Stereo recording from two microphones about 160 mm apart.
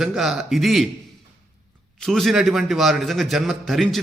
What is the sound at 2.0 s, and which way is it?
A man's voice, centre (ahead or behind).